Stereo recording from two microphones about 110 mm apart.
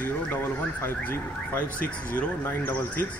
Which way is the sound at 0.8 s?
15° left (ahead or behind).